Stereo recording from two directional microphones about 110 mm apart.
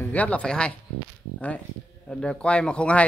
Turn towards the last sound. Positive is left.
turn(degrees=10)  # may be behind; listen again after turning